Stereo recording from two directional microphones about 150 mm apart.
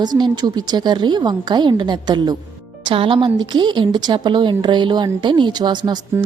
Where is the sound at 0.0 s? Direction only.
30° right (ahead or behind).